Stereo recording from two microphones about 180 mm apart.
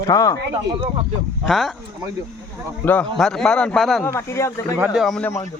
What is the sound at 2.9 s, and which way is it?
Speech, 5° left (ahead or behind).